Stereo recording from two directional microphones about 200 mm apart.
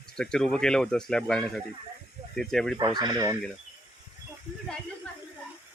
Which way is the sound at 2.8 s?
20° right (ahead or behind).